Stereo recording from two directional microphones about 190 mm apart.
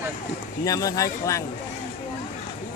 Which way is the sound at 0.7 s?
20° left (ahead or behind).